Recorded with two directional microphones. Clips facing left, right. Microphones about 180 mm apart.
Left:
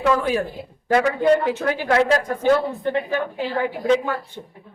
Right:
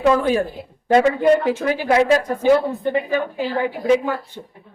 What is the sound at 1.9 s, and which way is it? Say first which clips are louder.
A woman's voice: right 3 dB; 10° right (ahead or behind).